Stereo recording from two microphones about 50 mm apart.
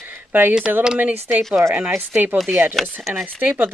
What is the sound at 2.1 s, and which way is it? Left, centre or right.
Speech, right.